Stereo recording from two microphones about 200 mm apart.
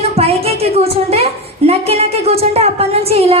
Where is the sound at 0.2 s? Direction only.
30° right (ahead or behind).